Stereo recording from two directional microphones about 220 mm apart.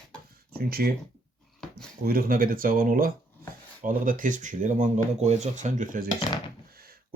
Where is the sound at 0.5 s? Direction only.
45° right (ahead or behind).